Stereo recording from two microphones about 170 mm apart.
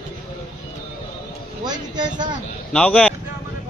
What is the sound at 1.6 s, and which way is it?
Speech, 25° right (ahead or behind).